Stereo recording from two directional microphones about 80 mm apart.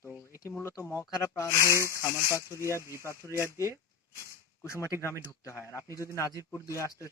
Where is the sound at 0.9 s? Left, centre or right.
Left.